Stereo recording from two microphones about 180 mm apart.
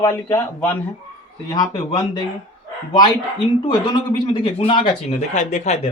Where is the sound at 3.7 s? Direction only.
25° left (ahead or behind).